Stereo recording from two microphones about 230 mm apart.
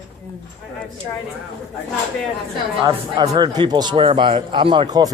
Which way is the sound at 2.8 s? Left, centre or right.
Centre.